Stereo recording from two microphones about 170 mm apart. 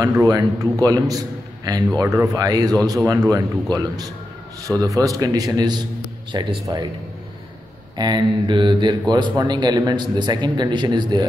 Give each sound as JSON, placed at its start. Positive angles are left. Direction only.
{"t": 0.0, "sound": "a man's voice", "side_deg": -20}
{"t": 8.0, "sound": "a man's voice", "side_deg": -25}